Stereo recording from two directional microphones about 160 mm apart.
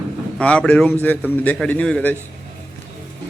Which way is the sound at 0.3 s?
5° left (ahead or behind).